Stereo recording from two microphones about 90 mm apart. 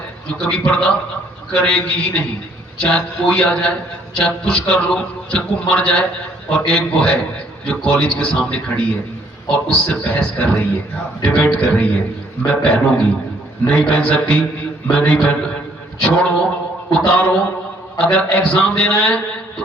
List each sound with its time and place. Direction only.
0.3 s a man's voice: 10° left (ahead or behind)